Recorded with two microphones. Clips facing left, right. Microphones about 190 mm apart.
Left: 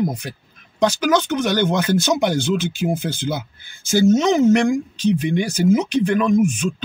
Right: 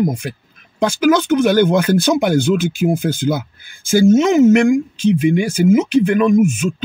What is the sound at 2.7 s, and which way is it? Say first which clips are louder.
Speech: right 5 dB; 10° right (ahead or behind).